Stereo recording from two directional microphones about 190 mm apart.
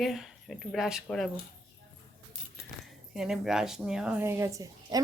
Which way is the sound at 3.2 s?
Centre (ahead or behind).